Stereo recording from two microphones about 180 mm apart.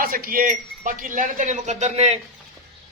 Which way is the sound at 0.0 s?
50° right (ahead or behind).